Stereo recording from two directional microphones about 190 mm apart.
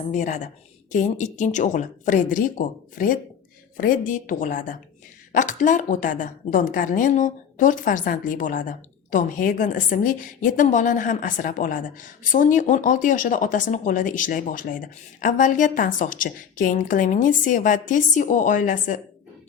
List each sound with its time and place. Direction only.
0.1 s a woman's voice: 40° left (ahead or behind)